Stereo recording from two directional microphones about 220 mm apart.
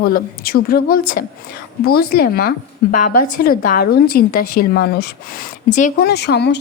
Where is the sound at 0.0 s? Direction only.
45° left (ahead or behind).